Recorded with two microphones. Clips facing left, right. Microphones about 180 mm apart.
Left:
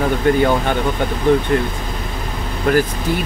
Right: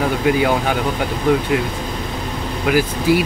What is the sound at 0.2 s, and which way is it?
Speech, 5° right (ahead or behind).